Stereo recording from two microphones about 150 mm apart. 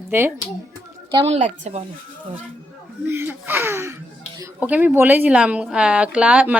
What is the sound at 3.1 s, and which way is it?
A woman's voice, 15° right (ahead or behind).